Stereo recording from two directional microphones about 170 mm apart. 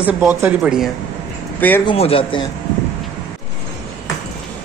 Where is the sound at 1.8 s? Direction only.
35° left (ahead or behind).